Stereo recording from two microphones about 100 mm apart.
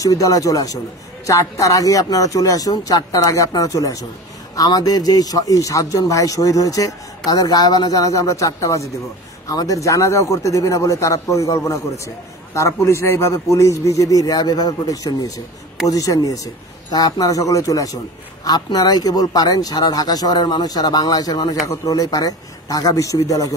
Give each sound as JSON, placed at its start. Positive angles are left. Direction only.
{"t": 0.0, "sound": "speech", "side_deg": 35}